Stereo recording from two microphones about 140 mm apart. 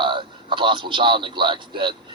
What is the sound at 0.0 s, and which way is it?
A man's voice, 35° right (ahead or behind).